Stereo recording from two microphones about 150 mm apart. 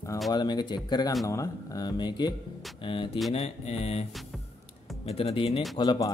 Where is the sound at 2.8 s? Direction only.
35° left (ahead or behind).